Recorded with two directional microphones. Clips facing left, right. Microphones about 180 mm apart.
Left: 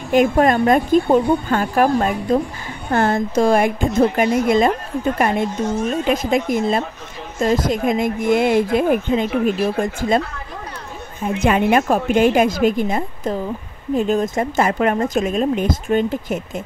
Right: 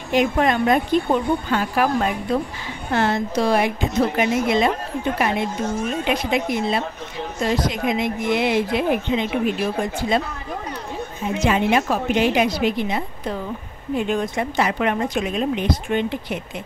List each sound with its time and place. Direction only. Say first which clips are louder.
0.1 s speech: left 4 dB; 50° left (ahead or behind)
11.2 s speech: left 3 dB; 55° left (ahead or behind)